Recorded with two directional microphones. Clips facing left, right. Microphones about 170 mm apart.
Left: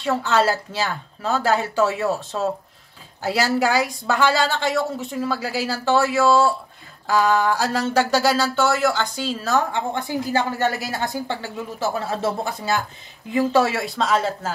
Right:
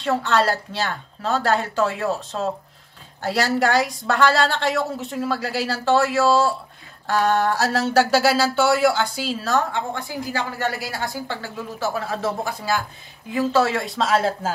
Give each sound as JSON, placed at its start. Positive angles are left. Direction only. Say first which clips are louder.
{"t": 0.0, "sound": "a woman's voice", "louder": "even", "side_deg": 5}
{"t": 9.7, "sound": "a woman's voice", "louder": "left 2 dB", "side_deg": 20}